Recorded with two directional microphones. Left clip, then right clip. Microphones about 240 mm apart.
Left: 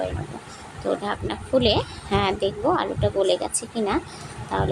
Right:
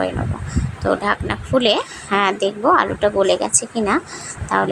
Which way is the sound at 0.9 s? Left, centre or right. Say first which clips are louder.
Right 7 dB; centre.